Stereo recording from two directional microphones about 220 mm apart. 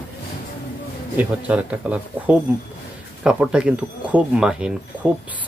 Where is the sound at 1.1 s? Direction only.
5° right (ahead or behind).